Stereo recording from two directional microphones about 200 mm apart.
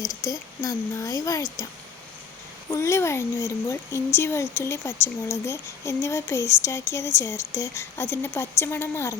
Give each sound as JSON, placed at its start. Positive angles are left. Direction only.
{"t": 0.0, "sound": "speech", "side_deg": 0}
{"t": 0.3, "sound": "speech", "side_deg": 15}
{"t": 2.6, "sound": "speech", "side_deg": 15}